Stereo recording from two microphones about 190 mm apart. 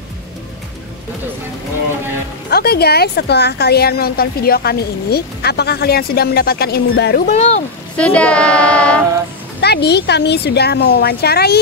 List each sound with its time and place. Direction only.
2.5 s a woman's voice: 55° left (ahead or behind)
7.2 s speech: 35° left (ahead or behind)
8.0 s speech: 5° left (ahead or behind)
9.6 s a woman's voice: 60° left (ahead or behind)